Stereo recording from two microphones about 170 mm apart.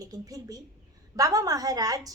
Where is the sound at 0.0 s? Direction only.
20° right (ahead or behind).